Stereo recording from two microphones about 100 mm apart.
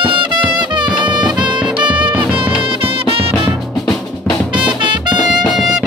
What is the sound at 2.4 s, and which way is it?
Music, 60° right (ahead or behind).